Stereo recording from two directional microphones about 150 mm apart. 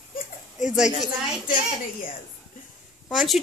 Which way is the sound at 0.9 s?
55° left (ahead or behind).